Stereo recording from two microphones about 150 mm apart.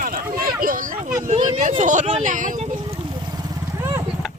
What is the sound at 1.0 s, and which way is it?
Speech, 55° right (ahead or behind).